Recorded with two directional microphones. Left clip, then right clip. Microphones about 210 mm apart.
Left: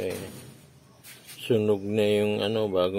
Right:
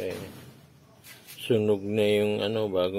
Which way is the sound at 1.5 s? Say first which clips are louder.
Even; centre (ahead or behind).